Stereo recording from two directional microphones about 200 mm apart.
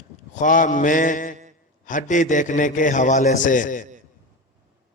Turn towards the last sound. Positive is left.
turn(degrees=40)  # may be behind; listen again after turning